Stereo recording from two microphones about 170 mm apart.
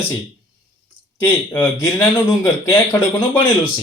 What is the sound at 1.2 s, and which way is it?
Speech, 15° left (ahead or behind).